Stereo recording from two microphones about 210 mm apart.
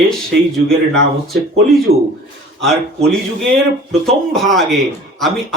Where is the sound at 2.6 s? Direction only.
Centre (ahead or behind).